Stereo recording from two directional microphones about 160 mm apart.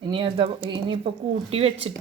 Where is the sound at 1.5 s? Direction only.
40° right (ahead or behind).